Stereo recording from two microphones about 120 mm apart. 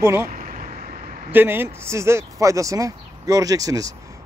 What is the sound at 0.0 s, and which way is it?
Speech, 25° right (ahead or behind).